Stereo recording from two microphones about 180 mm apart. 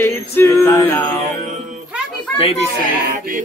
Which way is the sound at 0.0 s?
15° left (ahead or behind).